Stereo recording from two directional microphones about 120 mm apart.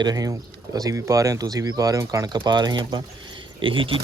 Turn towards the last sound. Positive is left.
turn(degrees=-45)  # may be behind; listen again after turning